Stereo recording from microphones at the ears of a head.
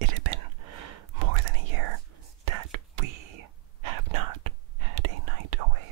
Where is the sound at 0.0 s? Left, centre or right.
Right.